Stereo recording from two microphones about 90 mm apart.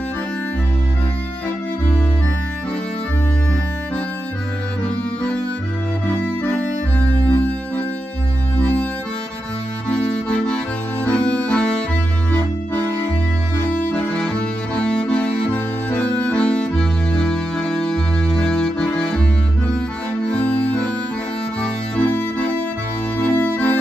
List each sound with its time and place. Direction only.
6.2 s music: 20° left (ahead or behind)
9.8 s music: 10° left (ahead or behind)
13.9 s music: 15° left (ahead or behind)
20.2 s music: 15° left (ahead or behind)